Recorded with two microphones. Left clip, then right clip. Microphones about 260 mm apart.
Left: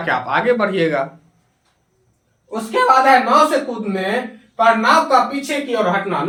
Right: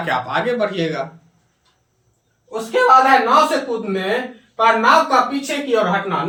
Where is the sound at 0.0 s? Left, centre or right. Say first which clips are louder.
Left 2 dB; centre.